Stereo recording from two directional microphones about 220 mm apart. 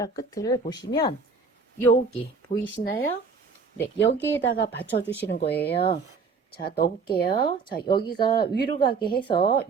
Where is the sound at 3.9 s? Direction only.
55° left (ahead or behind).